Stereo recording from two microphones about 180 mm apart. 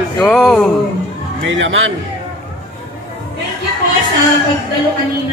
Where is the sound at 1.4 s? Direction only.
90° right.